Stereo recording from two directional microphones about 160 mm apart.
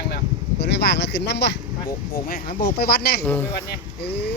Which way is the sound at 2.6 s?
80° left.